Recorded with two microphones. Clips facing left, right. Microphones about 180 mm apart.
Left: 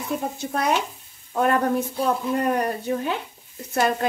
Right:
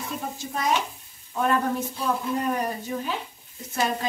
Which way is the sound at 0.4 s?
65° left (ahead or behind).